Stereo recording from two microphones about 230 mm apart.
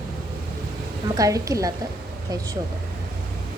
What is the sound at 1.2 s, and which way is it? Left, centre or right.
Speech, centre.